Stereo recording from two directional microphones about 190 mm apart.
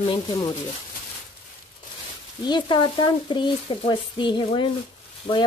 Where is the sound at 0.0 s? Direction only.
25° left (ahead or behind).